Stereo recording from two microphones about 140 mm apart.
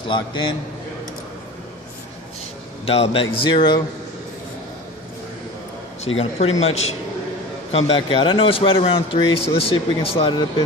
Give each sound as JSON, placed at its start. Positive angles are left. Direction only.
{"t": 0.1, "sound": "speech", "side_deg": 35}
{"t": 2.8, "sound": "speech", "side_deg": 45}
{"t": 6.1, "sound": "a man's voice", "side_deg": 50}